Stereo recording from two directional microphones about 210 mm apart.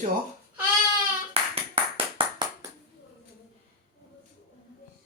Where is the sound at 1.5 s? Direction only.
25° right (ahead or behind).